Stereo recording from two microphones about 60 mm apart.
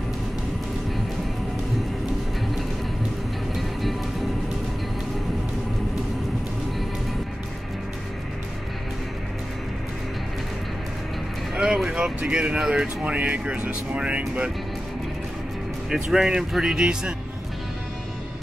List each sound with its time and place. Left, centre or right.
3.5 s music: centre
11.5 s speech: centre
15.9 s speech: centre